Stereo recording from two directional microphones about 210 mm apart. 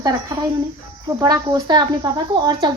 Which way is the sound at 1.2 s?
20° right (ahead or behind).